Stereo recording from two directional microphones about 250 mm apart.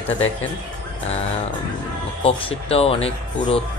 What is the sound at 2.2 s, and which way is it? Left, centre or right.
Speech, left.